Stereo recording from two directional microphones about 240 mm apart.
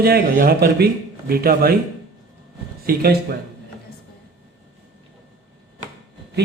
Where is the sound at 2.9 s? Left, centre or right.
Right.